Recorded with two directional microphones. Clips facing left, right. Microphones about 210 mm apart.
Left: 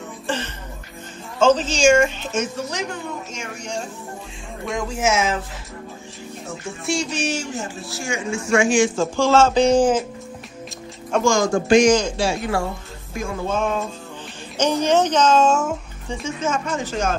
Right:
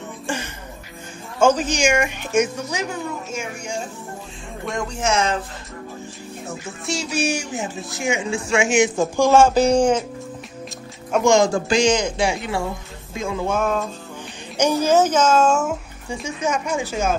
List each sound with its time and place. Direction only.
1.4 s speech: 10° right (ahead or behind); by 5.4 s 5° left (ahead or behind)
6.9 s speech: 5° right (ahead or behind)
11.2 s speech: 25° right (ahead or behind)
12.0 s speech: 15° right (ahead or behind)
13.6 s speech: centre (ahead or behind)